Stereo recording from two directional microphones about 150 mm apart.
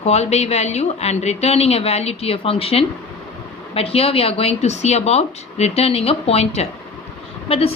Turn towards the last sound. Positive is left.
turn(degrees=40)  # may be behind; listen again after turning